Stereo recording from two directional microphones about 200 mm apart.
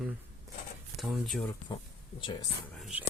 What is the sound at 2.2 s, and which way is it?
Speech, 25° left (ahead or behind).